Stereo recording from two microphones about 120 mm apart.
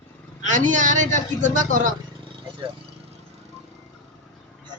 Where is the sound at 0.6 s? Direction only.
90° right.